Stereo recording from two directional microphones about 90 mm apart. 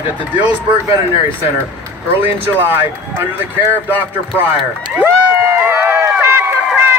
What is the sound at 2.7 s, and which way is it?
Speech, 25° right (ahead or behind).